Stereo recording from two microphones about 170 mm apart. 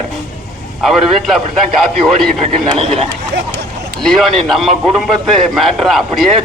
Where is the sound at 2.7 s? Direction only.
35° right (ahead or behind).